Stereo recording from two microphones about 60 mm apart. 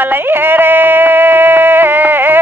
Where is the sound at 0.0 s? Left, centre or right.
Right.